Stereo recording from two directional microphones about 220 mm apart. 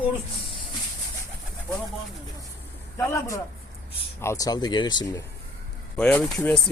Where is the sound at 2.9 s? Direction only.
15° left (ahead or behind).